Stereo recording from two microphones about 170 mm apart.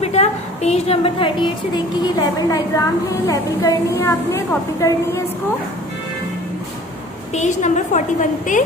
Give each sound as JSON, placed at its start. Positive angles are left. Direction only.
{"t": 0.0, "sound": "a sound", "side_deg": 40}
{"t": 2.0, "sound": "a woman's voice", "side_deg": 20}
{"t": 7.3, "sound": "a woman's voice", "side_deg": 45}